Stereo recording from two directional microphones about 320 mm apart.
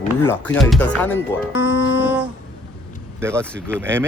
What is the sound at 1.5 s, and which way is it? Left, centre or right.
Music, left.